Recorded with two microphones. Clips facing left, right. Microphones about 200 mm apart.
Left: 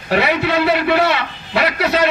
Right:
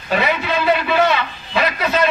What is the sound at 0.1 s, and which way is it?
A man's voice, 70° left (ahead or behind).